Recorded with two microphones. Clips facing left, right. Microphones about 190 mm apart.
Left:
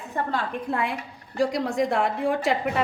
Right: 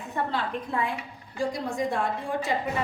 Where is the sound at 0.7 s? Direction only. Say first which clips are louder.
Left 2 dB; 75° left (ahead or behind).